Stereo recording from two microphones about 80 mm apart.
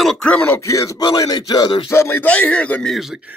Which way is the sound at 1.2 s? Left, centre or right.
Left.